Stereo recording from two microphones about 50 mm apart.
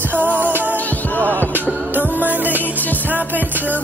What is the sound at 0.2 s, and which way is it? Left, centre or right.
Music, right.